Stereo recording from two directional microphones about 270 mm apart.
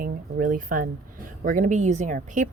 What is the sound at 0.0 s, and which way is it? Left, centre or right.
Speech, right.